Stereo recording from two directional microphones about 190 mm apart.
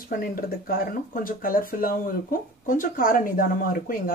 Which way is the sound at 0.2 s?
50° left (ahead or behind).